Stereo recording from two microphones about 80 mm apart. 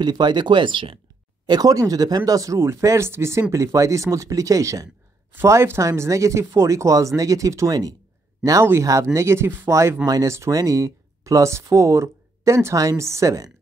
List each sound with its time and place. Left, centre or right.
0.0 s speech: right
1.4 s speech: right
5.3 s speech: right
9.1 s speech: right